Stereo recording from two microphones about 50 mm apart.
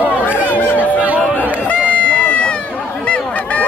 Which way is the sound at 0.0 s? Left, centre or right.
Right.